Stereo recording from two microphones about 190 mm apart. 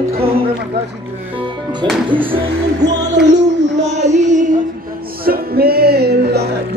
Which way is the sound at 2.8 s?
65° right (ahead or behind).